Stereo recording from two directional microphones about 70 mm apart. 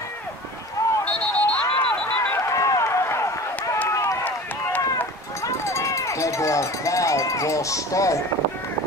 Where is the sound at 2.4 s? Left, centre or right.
Left.